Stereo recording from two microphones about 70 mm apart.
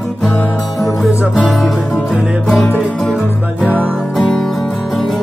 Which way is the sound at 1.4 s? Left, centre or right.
Centre.